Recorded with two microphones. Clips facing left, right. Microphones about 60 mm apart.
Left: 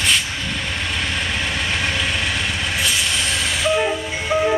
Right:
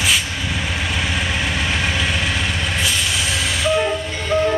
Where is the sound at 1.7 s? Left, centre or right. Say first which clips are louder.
Right 1 dB; centre.